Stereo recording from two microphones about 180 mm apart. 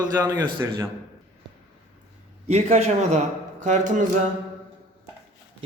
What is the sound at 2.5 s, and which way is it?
A man's voice, 35° right (ahead or behind).